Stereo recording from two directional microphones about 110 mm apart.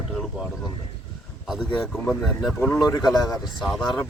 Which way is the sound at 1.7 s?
5° left (ahead or behind).